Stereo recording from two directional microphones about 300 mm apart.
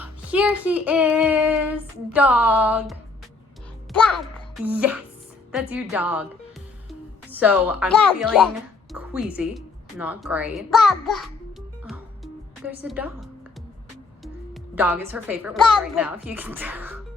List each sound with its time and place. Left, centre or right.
0.0 s child singing: centre
3.9 s a child's voice: centre
5.5 s child singing: centre
7.3 s child singing: centre
11.9 s music: centre
14.5 s child singing: centre